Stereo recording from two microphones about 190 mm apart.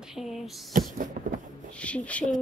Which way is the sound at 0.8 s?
45° right (ahead or behind).